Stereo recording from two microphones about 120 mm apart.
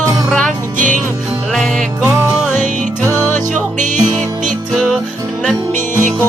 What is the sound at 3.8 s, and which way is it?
Music, 90° right.